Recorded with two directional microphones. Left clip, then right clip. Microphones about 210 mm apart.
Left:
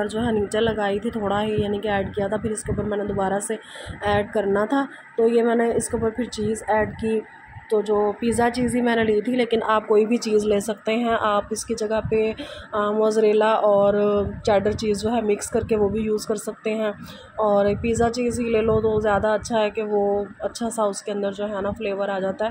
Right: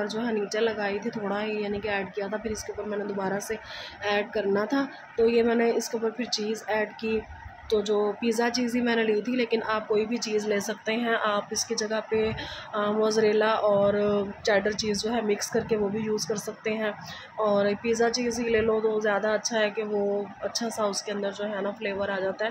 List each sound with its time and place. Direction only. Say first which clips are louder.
0.2 s a woman's voice: left 5 dB; 15° left (ahead or behind)
9.8 s a woman's voice: left 8 dB; 30° left (ahead or behind)